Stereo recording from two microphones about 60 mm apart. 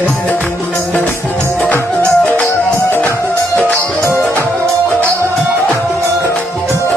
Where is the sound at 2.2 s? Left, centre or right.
Left.